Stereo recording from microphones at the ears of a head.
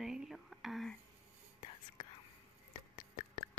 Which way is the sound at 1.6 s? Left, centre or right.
Left.